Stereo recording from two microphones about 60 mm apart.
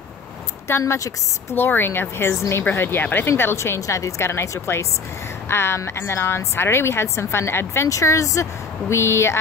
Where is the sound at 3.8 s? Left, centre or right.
Left.